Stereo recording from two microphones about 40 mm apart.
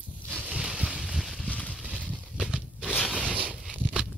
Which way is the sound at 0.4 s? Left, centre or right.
Right.